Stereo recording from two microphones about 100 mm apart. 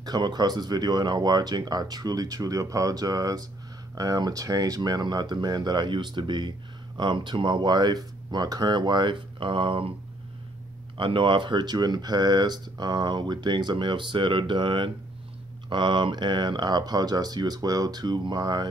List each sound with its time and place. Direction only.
0.0 s speech: 40° right (ahead or behind); by 9.8 s 60° right (ahead or behind)
11.0 s speech: 55° right (ahead or behind)